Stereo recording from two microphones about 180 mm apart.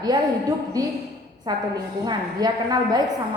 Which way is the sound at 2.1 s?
20° right (ahead or behind).